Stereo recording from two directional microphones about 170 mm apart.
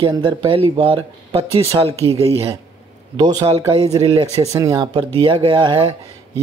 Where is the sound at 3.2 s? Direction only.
20° right (ahead or behind).